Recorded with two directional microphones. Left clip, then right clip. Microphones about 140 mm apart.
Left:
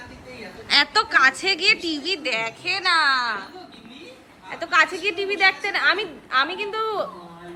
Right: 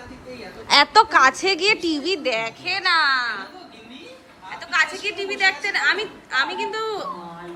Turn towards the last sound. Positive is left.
turn(degrees=15)  # may be behind; listen again after turning